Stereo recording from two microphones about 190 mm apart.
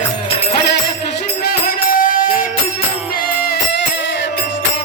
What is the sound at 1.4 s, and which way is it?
Music, 50° left (ahead or behind).